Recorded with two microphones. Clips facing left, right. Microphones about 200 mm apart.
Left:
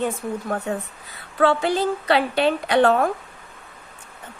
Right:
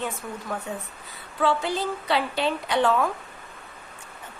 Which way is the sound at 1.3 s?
70° left (ahead or behind).